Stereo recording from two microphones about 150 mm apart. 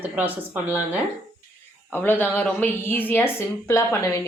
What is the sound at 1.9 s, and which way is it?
A woman's voice, 10° left (ahead or behind).